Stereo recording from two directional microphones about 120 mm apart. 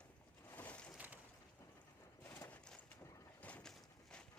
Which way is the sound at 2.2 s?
15° left (ahead or behind).